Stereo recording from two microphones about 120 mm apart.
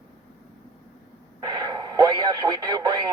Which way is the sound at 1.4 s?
30° right (ahead or behind).